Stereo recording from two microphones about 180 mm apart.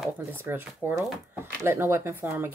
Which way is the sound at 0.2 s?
10° right (ahead or behind).